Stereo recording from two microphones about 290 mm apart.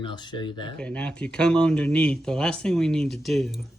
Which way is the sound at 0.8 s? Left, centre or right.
Centre.